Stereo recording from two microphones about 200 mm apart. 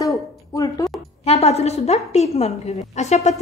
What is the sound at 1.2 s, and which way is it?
A woman's voice, 30° left (ahead or behind).